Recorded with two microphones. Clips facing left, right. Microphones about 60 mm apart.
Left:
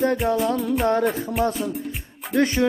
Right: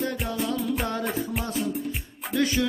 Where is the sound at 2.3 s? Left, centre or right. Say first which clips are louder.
Left 4 dB; left.